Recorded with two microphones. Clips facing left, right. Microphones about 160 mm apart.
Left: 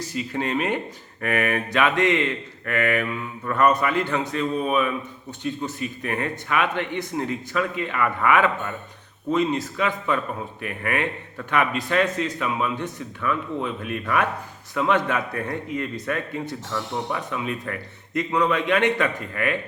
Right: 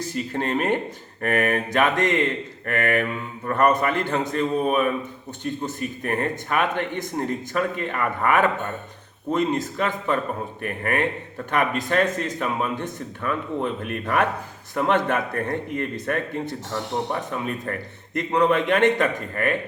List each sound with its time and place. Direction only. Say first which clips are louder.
0.0 s speech: right 1 dB; 50° right (ahead or behind)
16.7 s speech: right 2 dB; 40° right (ahead or behind)